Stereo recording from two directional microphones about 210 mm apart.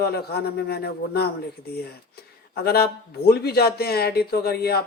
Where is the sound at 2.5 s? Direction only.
50° left (ahead or behind).